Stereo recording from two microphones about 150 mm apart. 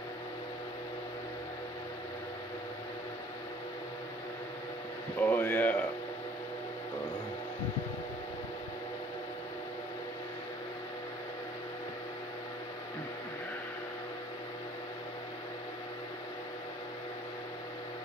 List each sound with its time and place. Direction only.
5.2 s speech: 10° left (ahead or behind)